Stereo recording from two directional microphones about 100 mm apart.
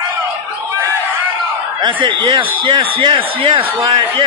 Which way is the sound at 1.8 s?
55° right (ahead or behind).